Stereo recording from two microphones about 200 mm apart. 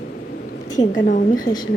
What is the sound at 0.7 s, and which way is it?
Speech, 40° left (ahead or behind).